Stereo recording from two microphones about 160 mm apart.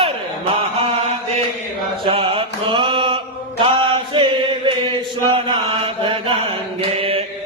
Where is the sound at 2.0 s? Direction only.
35° right (ahead or behind).